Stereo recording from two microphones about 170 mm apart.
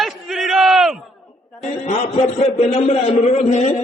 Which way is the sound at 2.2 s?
40° left (ahead or behind).